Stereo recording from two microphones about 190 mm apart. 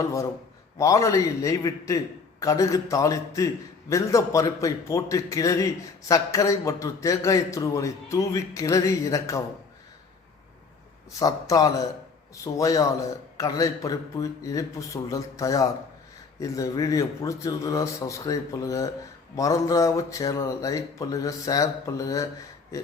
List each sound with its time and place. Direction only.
0.8 s a man's voice: 15° left (ahead or behind)
11.2 s a man's voice: 20° left (ahead or behind)
22.7 s a sound: 15° left (ahead or behind)